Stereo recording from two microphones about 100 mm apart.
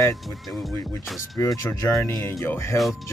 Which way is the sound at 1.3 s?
30° left (ahead or behind).